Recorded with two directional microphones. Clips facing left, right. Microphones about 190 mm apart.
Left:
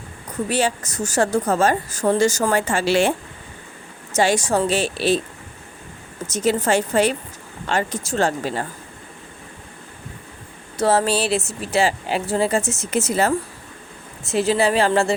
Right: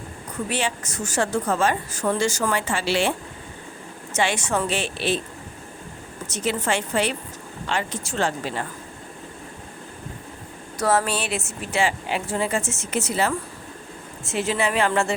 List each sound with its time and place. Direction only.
0.5 s a woman's voice: 40° left (ahead or behind)
6.3 s a woman's voice: 40° left (ahead or behind)
10.8 s a woman's voice: 30° left (ahead or behind)